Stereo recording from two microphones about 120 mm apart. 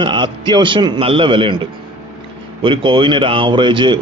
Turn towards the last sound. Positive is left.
turn(degrees=-40)  # may be behind; listen again after turning